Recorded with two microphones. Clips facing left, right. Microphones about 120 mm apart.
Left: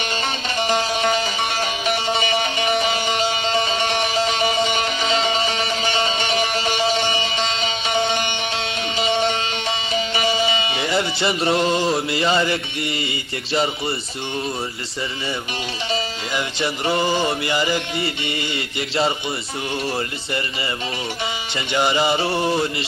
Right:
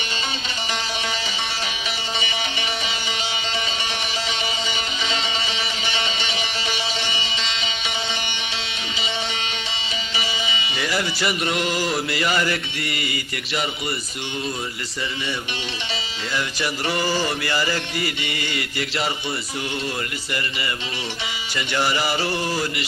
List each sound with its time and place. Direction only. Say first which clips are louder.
0.7 s music: left 8 dB; 45° left (ahead or behind)
10.8 s music: left 3 dB; 25° left (ahead or behind)
16.3 s music: left 1 dB; 25° left (ahead or behind)
21.5 s music: left 2 dB; 20° left (ahead or behind)